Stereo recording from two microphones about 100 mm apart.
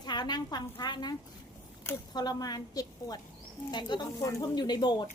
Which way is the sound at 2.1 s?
40° left (ahead or behind).